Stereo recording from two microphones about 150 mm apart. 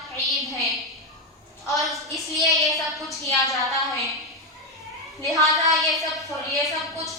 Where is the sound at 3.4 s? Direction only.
20° left (ahead or behind).